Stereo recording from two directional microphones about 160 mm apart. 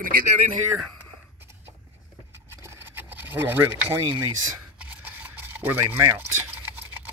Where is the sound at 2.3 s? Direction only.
15° right (ahead or behind).